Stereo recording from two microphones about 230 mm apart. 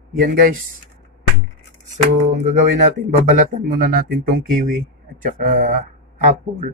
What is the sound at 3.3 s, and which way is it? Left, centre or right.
Speech, right.